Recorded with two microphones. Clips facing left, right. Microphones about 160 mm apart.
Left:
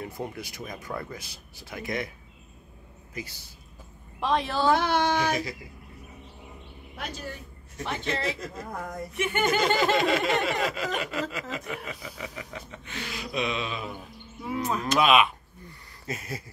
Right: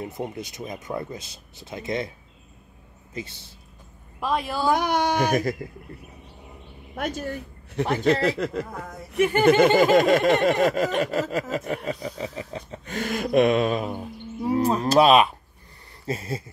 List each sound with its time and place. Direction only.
0.0 s speech: 20° right (ahead or behind)
3.2 s speech: 25° right (ahead or behind)
4.2 s speech: 5° right (ahead or behind)
5.1 s speech: 50° right (ahead or behind)
7.0 s speech: 50° right (ahead or behind)
7.9 s speech: 65° right (ahead or behind)
9.1 s speech: 35° right (ahead or behind)
9.5 s speech: 55° right (ahead or behind)
14.4 s speech: 35° right (ahead or behind)